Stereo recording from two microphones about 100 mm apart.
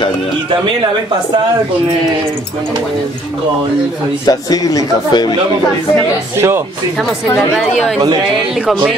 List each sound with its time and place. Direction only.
4.3 s speech: 40° left (ahead or behind)
6.3 s speech: 25° right (ahead or behind)